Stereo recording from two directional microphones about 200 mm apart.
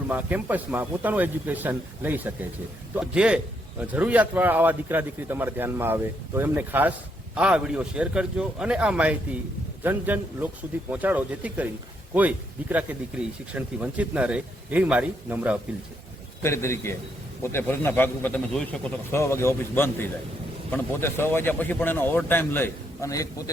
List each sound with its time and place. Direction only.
0.1 s a man's voice: 10° right (ahead or behind)
16.4 s speech: 15° left (ahead or behind)